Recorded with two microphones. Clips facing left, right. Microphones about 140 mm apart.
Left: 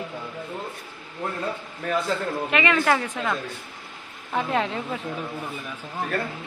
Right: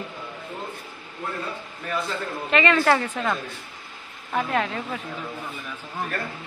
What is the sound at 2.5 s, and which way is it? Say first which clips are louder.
Speech: right 3 dB; 10° left (ahead or behind).